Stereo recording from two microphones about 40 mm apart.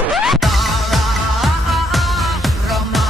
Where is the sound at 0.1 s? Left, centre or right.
Centre.